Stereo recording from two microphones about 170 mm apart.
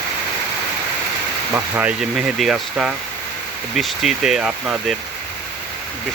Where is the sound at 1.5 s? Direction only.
10° right (ahead or behind).